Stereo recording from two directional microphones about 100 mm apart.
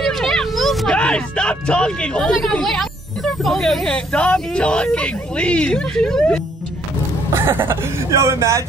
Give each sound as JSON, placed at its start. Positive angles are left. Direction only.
{"t": 0.0, "sound": "a sound", "side_deg": 5}
{"t": 3.4, "sound": "speech", "side_deg": 5}
{"t": 7.3, "sound": "speech", "side_deg": -25}